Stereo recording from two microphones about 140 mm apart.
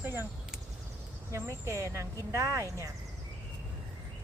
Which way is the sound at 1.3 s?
20° right (ahead or behind).